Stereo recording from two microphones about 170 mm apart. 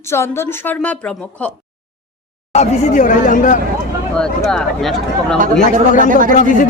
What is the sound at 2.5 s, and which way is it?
Speech, 45° left (ahead or behind).